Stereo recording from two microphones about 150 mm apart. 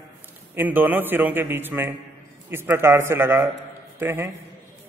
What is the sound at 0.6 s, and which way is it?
A man's voice, 10° right (ahead or behind).